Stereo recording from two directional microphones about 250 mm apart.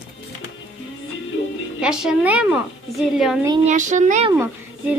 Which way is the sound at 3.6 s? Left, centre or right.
Right.